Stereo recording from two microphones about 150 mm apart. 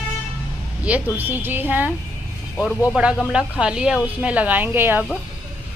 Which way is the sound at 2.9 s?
5° right (ahead or behind).